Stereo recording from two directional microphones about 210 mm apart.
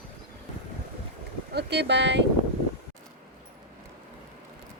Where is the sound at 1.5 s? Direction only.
55° right (ahead or behind).